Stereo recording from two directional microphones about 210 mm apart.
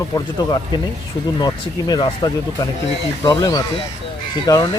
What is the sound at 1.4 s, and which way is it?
Speech, 20° left (ahead or behind).